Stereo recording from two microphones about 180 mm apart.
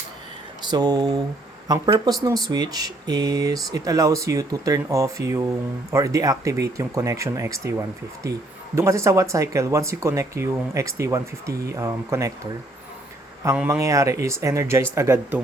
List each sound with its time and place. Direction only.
0.6 s speech: 20° right (ahead or behind)
13.4 s speech: 15° right (ahead or behind)